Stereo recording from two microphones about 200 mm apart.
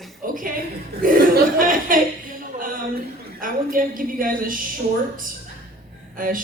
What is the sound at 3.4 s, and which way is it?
A woman's voice, 45° right (ahead or behind).